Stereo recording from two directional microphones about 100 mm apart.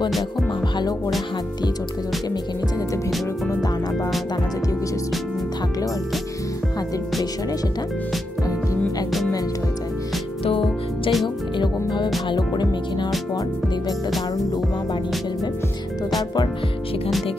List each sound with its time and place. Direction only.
0.7 s music: 40° left (ahead or behind)
10.6 s music: centre (ahead or behind)
11.5 s music: 50° left (ahead or behind)